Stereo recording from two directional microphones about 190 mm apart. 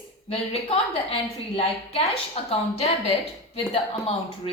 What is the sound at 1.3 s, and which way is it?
A woman's voice, 30° left (ahead or behind).